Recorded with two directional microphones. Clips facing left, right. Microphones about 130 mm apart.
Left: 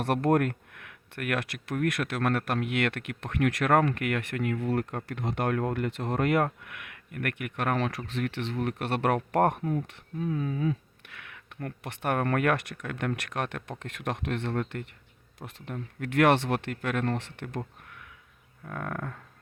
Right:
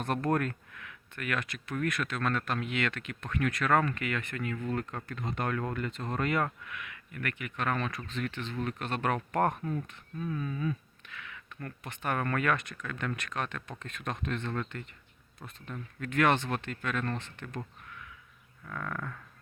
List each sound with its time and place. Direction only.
0.0 s speech: 65° left (ahead or behind)
9.6 s speech: 15° left (ahead or behind)
9.8 s speech: 75° left (ahead or behind)
15.4 s speech: 80° left
16.0 s speech: 70° left (ahead or behind)
17.8 s a sound: 55° left (ahead or behind)
18.6 s livestock: 50° left (ahead or behind)